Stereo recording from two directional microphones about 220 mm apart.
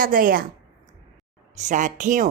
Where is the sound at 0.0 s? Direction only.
40° right (ahead or behind).